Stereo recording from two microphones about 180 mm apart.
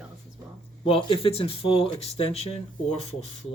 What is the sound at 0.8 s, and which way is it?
Speech, 30° left (ahead or behind).